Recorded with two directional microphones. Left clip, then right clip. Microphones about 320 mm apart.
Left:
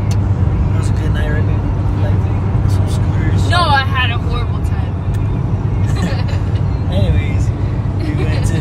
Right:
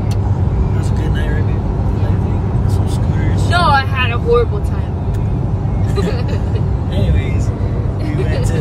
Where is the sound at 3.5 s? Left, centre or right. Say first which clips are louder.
Even; centre.